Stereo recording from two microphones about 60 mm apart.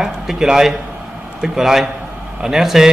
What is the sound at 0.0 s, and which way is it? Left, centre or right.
A man's voice, centre.